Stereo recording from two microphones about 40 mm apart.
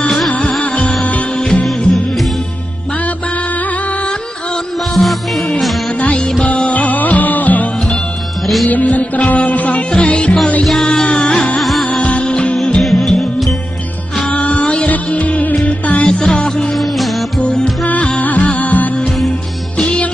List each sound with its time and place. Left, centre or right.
0.3 s music: left
4.9 s music: centre
5.9 s music: left
10.7 s music: centre
11.1 s music: left
11.6 s music: centre
12.0 s music: left
12.8 s music: centre
14.3 s music: left
16.1 s music: centre
16.7 s music: centre
18.2 s music: left